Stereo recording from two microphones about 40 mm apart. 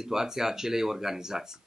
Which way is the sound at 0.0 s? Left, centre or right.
Centre.